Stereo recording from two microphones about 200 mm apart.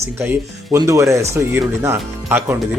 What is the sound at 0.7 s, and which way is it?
Speech, 15° right (ahead or behind).